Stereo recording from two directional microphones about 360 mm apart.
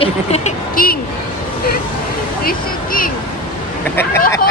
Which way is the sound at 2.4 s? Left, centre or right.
Left.